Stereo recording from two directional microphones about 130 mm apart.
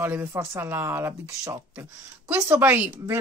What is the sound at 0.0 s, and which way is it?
Speech, 15° right (ahead or behind).